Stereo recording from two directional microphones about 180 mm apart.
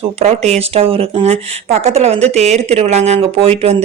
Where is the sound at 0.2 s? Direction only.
35° right (ahead or behind).